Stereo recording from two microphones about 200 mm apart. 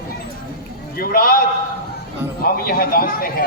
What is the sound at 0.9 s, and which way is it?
Speech, 45° left (ahead or behind).